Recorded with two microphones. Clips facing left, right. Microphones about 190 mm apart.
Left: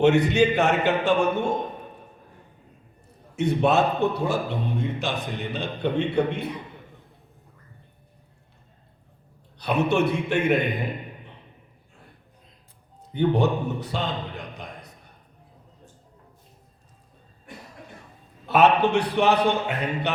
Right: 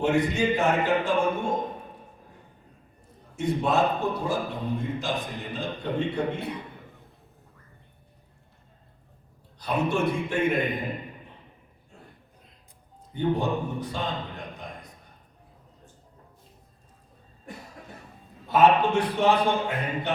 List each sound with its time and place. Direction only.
0.0 s a man's voice: 75° left (ahead or behind)
3.3 s a man's voice: 70° left (ahead or behind)
9.6 s a man's voice: 70° left (ahead or behind)
13.1 s a man's voice: 75° left (ahead or behind)
18.4 s a man's voice: 70° left (ahead or behind)